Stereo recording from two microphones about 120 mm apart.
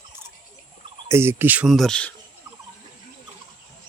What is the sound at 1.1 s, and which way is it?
Cricket, 20° right (ahead or behind).